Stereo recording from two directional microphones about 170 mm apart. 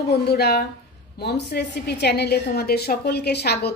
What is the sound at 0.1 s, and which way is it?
A woman's voice, 70° left (ahead or behind).